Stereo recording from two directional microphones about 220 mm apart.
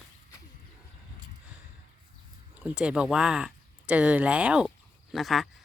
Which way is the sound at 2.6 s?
5° right (ahead or behind).